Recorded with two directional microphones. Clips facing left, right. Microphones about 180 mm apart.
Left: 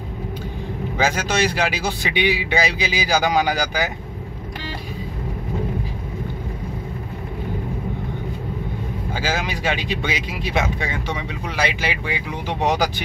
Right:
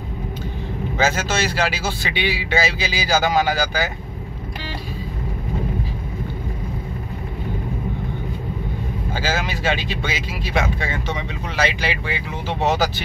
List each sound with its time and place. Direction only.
0.9 s speech: 15° left (ahead or behind)
9.1 s speech: 15° left (ahead or behind)